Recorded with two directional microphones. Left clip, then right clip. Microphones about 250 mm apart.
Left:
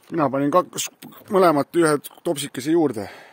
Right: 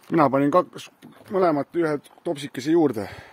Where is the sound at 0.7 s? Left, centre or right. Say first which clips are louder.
Left 10 dB; left.